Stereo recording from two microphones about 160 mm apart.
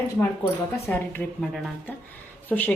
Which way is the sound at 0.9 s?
10° left (ahead or behind).